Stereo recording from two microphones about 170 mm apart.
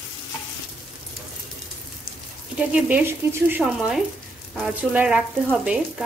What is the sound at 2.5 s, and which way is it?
Speech, 10° right (ahead or behind).